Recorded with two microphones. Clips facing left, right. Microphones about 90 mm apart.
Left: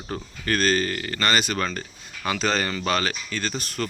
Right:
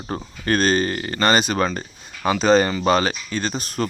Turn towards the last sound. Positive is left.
turn(degrees=-20)  # may be behind; listen again after turning